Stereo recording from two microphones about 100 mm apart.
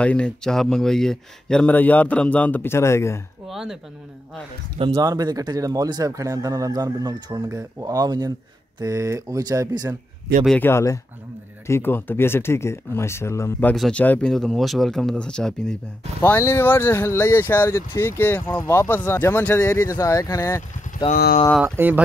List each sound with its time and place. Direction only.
0.0 s speech: 10° left (ahead or behind); by 3.2 s 30° left (ahead or behind)
3.4 s speech: centre (ahead or behind)
4.9 s speech: 40° right (ahead or behind)
10.6 s speech: 25° left (ahead or behind)
13.9 s speech: 15° left (ahead or behind)
14.3 s speech: 5° left (ahead or behind)
16.2 s speech: 20° left (ahead or behind)
21.0 s speech: 65° left (ahead or behind)
21.6 s speech: 20° right (ahead or behind)